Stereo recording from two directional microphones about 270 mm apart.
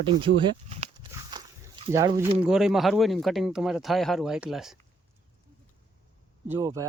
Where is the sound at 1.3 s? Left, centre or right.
Centre.